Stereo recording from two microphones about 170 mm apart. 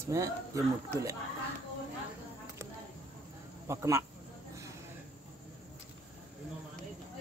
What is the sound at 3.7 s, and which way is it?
Speech, 15° right (ahead or behind).